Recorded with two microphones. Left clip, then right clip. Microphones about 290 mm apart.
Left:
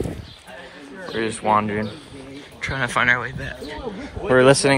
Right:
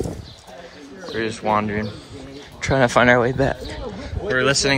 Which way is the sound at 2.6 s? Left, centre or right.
Centre.